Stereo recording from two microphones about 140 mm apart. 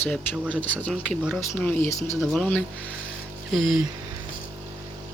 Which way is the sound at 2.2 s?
5° left (ahead or behind).